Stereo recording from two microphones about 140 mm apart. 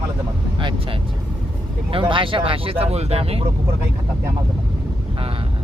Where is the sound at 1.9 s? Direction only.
35° right (ahead or behind).